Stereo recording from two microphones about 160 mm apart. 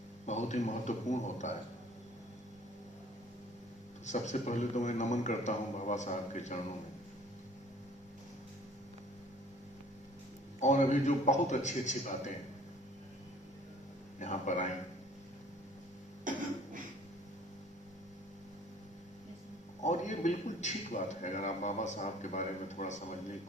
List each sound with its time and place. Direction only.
0.3 s a man's voice: 45° left (ahead or behind)
4.0 s a man's voice: 45° left (ahead or behind)
10.6 s a man's voice: 50° left (ahead or behind)
14.2 s a man's voice: 50° left (ahead or behind)
16.3 s cough: 55° right (ahead or behind)
19.8 s a man's voice: 45° left (ahead or behind)